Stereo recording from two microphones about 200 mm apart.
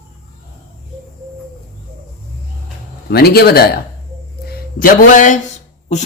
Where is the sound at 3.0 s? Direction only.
50° left (ahead or behind).